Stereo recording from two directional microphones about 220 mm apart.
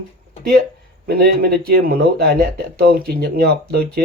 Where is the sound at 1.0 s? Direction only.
45° right (ahead or behind).